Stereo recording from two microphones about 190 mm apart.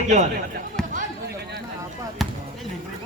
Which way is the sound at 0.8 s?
5° left (ahead or behind).